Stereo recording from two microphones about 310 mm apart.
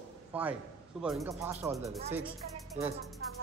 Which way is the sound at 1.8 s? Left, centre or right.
Centre.